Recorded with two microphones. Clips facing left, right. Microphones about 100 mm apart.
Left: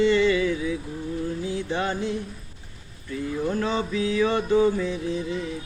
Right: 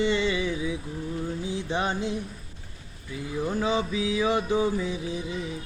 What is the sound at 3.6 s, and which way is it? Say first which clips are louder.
Male singing: left 1 dB; 10° right (ahead or behind).